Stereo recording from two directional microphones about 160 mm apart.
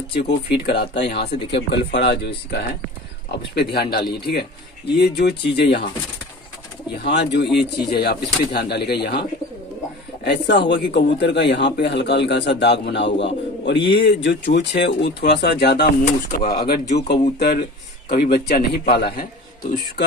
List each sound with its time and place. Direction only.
0.1 s a man's voice: 85° left
3.3 s speech: 80° left
4.1 s a man's voice: 90° left
7.0 s a man's voice: 90° left
10.2 s a man's voice: 90° left
13.7 s speech: 30° left (ahead or behind)
14.0 s a man's voice: 90° left; by 16.8 s 70° left (ahead or behind)
18.0 s speech: 60° left (ahead or behind)
18.9 s speech: 80° left